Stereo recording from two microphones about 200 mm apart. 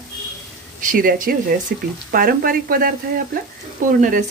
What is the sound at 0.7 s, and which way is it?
Speech, 45° right (ahead or behind).